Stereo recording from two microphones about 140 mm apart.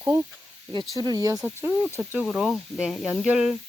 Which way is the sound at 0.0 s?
20° right (ahead or behind).